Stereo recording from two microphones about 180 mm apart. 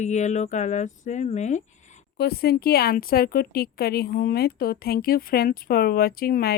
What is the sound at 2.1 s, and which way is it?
A woman's voice, 60° left (ahead or behind).